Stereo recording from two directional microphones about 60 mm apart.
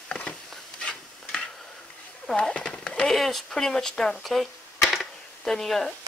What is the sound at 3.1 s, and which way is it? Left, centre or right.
Speech, centre.